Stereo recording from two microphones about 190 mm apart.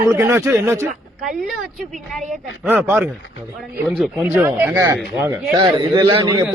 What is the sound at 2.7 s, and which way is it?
Speech, 10° right (ahead or behind).